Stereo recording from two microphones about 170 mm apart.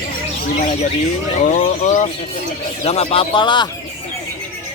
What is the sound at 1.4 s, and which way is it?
Speech, 45° left (ahead or behind).